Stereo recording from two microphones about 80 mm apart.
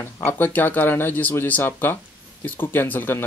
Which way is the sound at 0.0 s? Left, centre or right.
Left.